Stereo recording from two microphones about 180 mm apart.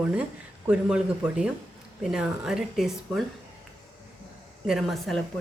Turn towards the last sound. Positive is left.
turn(degrees=0)  # may be behind; listen again after turning